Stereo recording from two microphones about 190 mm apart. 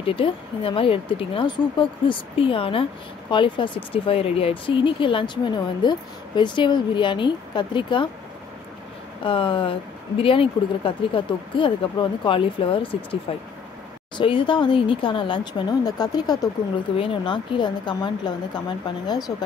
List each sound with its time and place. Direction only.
0.0 s speech: 30° left (ahead or behind)
9.2 s speech: 25° left (ahead or behind)